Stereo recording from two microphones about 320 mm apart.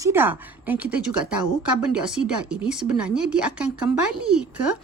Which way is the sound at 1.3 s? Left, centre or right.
Right.